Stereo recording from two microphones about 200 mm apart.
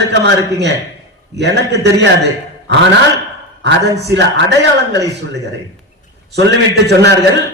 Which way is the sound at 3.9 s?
60° right (ahead or behind).